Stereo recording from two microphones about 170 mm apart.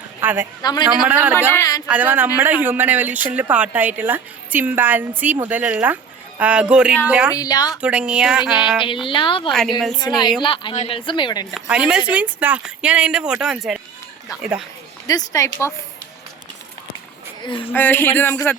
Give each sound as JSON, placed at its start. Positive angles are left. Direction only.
{"t": 0.2, "sound": "a man's voice", "side_deg": -10}
{"t": 0.6, "sound": "speech", "side_deg": 25}
{"t": 1.0, "sound": "speech", "side_deg": -10}
{"t": 1.5, "sound": "speech", "side_deg": 20}
{"t": 1.9, "sound": "speech", "side_deg": -10}
{"t": 7.3, "sound": "speech", "side_deg": 20}
{"t": 7.8, "sound": "speech", "side_deg": -5}
{"t": 8.8, "sound": "speech", "side_deg": 30}
{"t": 9.5, "sound": "speech", "side_deg": 0}
{"t": 10.4, "sound": "speech", "side_deg": 30}
{"t": 11.5, "sound": "speech", "side_deg": -5}
{"t": 15.0, "sound": "speech", "side_deg": 20}
{"t": 17.4, "sound": "speech", "side_deg": 30}
{"t": 17.7, "sound": "speech", "side_deg": 10}